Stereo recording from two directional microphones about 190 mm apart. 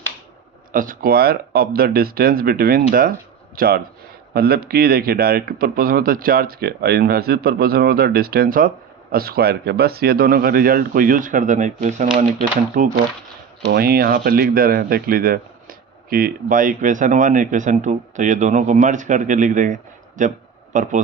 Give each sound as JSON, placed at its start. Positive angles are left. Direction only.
{"t": 0.7, "sound": "speech", "side_deg": -45}
{"t": 13.7, "sound": "speech", "side_deg": -55}